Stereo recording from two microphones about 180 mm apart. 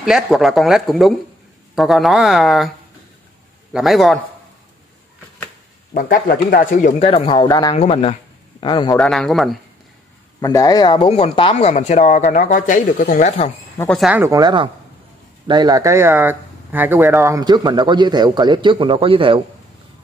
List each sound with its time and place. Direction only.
0.0 s speech: centre (ahead or behind)
3.7 s speech: centre (ahead or behind)
5.9 s speech: 50° left (ahead or behind); by 7.7 s 20° left (ahead or behind)
7.7 s speech: 35° left (ahead or behind)
8.9 s speech: 5° left (ahead or behind)
10.4 s speech: 20° left (ahead or behind); by 13.5 s 45° left (ahead or behind)
13.9 s speech: 5° right (ahead or behind)
14.2 s speech: 20° right (ahead or behind)